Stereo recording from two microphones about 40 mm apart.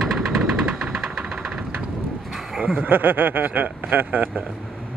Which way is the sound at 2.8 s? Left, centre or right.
Right.